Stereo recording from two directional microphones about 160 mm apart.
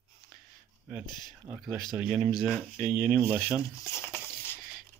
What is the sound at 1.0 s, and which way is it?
Speech, 25° left (ahead or behind).